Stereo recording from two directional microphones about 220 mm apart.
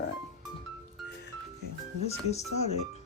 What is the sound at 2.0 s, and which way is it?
Speech, 30° left (ahead or behind).